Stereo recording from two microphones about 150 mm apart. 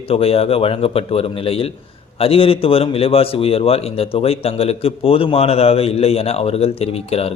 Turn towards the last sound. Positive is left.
turn(degrees=40)  # may be behind; listen again after turning